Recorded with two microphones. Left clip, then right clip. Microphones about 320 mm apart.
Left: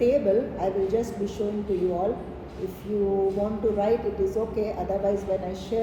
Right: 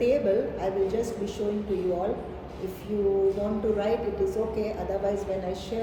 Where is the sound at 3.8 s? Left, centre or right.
Centre.